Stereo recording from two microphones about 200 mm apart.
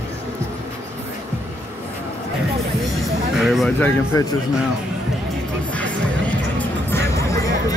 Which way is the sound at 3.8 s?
15° left (ahead or behind).